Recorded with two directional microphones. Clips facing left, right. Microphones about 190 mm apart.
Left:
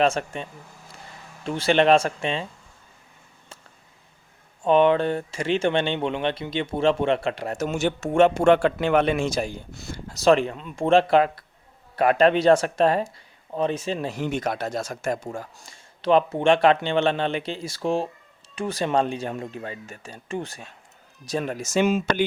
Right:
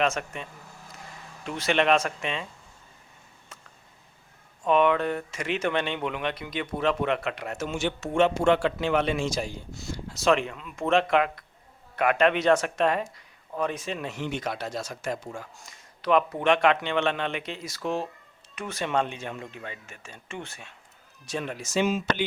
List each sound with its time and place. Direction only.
0.0 s speech: 30° left (ahead or behind)
1.5 s speech: 30° left (ahead or behind)
4.6 s speech: 30° left (ahead or behind); by 10.2 s 55° left (ahead or behind)
10.2 s speech: 35° left (ahead or behind); by 22.3 s 50° left (ahead or behind)